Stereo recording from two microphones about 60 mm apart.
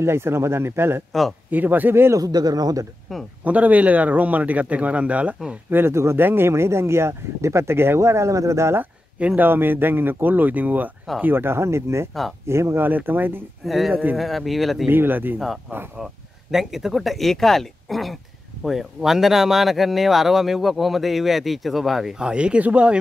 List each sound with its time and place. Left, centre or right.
0.0 s speech: right
1.5 s speech: right
2.1 s speech: right
3.1 s speech: centre
3.4 s speech: right
5.7 s speech: right
9.4 s speech: right
12.1 s speech: centre
12.4 s speech: right
12.8 s speech: right
13.7 s speech: centre
14.9 s speech: right
15.3 s speech: centre; by 22.9 s right